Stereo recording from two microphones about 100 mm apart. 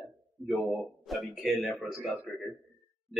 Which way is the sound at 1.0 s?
Centre (ahead or behind).